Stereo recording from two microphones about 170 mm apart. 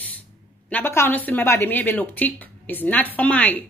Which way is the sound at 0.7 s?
10° left (ahead or behind).